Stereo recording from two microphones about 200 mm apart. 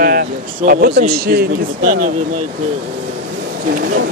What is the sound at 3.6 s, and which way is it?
Speech, 45° right (ahead or behind).